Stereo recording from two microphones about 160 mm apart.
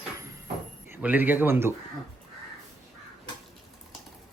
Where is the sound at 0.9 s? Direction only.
10° right (ahead or behind).